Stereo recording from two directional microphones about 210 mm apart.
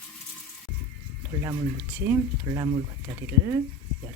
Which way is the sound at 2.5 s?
20° right (ahead or behind).